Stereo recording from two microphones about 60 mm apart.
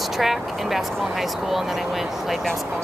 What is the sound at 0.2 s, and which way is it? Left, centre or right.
Speech, centre.